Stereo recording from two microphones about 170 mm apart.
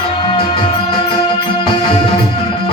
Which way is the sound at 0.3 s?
30° left (ahead or behind).